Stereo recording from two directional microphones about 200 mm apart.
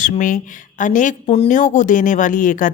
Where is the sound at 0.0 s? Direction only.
40° left (ahead or behind).